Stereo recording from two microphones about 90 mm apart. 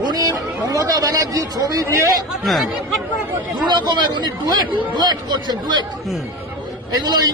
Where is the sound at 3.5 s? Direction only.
55° right (ahead or behind).